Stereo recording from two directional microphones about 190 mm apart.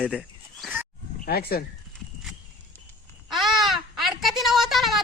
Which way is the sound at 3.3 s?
Centre (ahead or behind).